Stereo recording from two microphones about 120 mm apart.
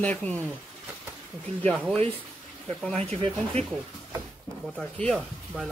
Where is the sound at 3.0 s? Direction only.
60° right (ahead or behind).